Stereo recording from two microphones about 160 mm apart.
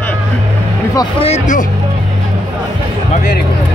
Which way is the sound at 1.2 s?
45° left (ahead or behind).